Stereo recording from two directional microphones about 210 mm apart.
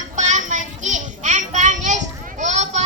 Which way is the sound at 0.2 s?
35° right (ahead or behind).